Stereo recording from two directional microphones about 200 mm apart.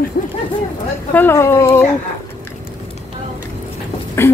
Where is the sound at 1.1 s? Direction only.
10° left (ahead or behind).